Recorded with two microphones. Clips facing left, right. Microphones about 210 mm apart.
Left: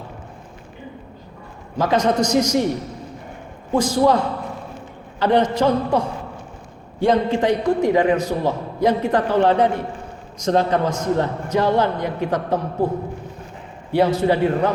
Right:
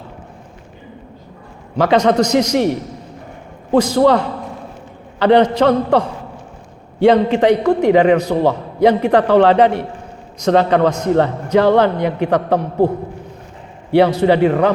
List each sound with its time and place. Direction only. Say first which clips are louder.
1.8 s a man's voice: right 5 dB; 70° right (ahead or behind)
3.7 s a man's voice: right 5 dB; 70° right (ahead or behind)
5.2 s a man's voice: right 5 dB; 65° right (ahead or behind)
7.0 s a man's voice: right 6 dB; 70° right (ahead or behind)
13.9 s a man's voice: right 5 dB; 70° right (ahead or behind)